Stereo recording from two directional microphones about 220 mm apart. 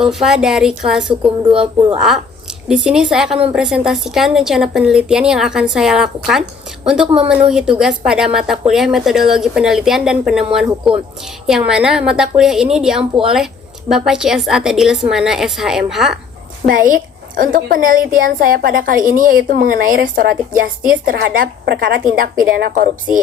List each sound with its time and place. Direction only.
0.0 s speech: centre (ahead or behind)
1.4 s speech: 20° right (ahead or behind)
2.6 s speech: centre (ahead or behind)
16.6 s a woman's voice: 40° right (ahead or behind)